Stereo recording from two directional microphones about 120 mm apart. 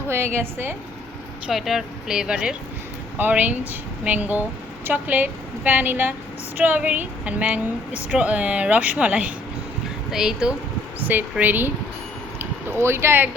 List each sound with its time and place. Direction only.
0.1 s a woman's voice: 20° right (ahead or behind)
1.5 s a woman's voice: centre (ahead or behind); by 13.3 s 20° right (ahead or behind)